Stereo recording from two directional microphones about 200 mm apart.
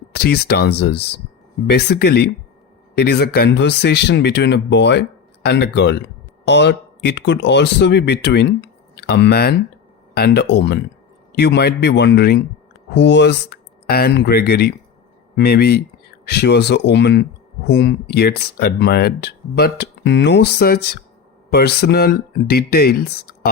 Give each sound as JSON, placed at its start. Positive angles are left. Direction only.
{"t": 0.1, "sound": "speech", "side_deg": 55}